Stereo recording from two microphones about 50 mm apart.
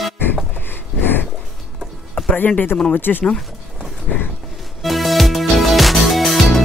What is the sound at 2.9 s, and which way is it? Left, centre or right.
Speech, left.